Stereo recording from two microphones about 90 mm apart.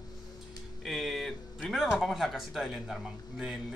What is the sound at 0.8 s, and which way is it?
A woman's voice, centre (ahead or behind).